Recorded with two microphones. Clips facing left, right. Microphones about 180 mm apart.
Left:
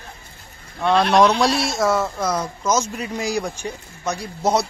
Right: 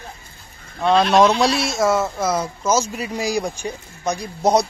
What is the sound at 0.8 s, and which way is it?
Speech, 20° right (ahead or behind).